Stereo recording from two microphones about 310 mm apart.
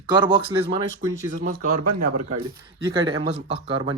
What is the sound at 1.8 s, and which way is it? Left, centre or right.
Speech, right.